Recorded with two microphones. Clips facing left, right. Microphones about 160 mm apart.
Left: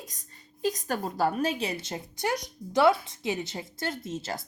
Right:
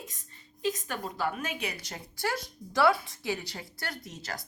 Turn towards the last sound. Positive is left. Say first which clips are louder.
# left 6 dB
turn(degrees=25)  # may be behind; listen again after turning